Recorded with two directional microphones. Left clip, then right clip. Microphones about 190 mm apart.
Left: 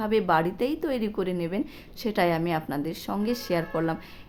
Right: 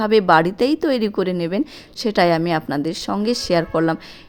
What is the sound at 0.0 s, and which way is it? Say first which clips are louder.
A woman's voice: right 9 dB; 45° right (ahead or behind).